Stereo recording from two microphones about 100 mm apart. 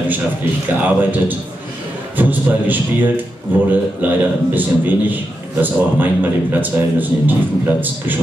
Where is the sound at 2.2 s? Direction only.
20° right (ahead or behind).